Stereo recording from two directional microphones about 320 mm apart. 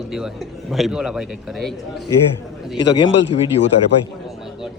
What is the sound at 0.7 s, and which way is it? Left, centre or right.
A man's voice, centre.